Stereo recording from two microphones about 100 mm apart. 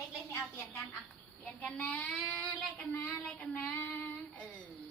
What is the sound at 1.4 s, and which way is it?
Child singing, 10° left (ahead or behind).